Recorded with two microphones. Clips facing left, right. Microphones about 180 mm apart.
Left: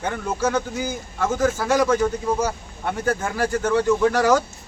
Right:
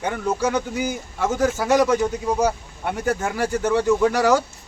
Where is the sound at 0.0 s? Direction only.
15° right (ahead or behind).